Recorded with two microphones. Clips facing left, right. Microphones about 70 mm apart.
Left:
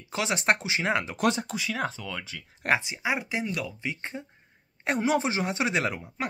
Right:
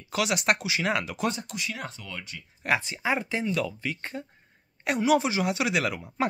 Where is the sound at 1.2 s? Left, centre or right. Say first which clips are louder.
Left 4 dB; left.